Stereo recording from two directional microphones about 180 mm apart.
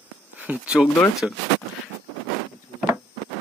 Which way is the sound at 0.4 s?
5° right (ahead or behind).